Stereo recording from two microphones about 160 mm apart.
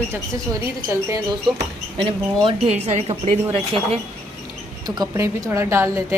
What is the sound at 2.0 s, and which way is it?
A woman's voice, 35° right (ahead or behind).